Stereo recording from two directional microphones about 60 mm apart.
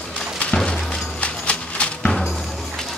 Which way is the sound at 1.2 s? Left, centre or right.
Centre.